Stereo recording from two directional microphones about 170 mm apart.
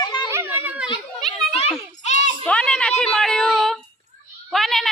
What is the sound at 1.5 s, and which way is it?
Children playing, 35° left (ahead or behind).